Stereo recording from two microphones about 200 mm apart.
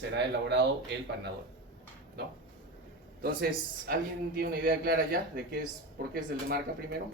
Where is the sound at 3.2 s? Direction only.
50° right (ahead or behind).